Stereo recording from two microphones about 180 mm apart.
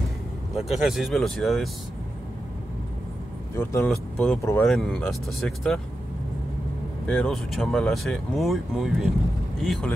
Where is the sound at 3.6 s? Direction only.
15° left (ahead or behind).